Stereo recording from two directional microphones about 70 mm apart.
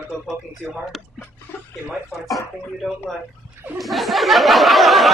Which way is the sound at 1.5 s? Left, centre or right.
Left.